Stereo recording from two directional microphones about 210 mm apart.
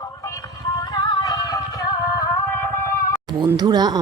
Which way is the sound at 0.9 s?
20° left (ahead or behind).